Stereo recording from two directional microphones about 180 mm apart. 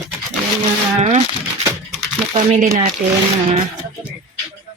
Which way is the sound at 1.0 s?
40° right (ahead or behind).